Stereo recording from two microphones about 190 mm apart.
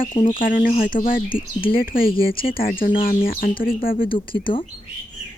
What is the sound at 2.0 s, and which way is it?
Speech, 30° left (ahead or behind).